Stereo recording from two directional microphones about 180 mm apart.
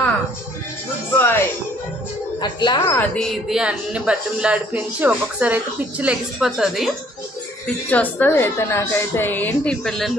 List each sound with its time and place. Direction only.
1.1 s music: 10° left (ahead or behind)
2.4 s a woman's voice: 25° left (ahead or behind)
3.0 s speech: centre (ahead or behind)
7.6 s a woman's voice: 10° left (ahead or behind)